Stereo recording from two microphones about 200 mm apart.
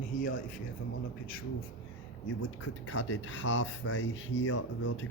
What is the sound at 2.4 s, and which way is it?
Speech, 70° left (ahead or behind).